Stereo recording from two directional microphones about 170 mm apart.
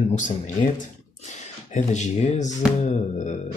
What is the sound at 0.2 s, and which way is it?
Speech, 45° left (ahead or behind).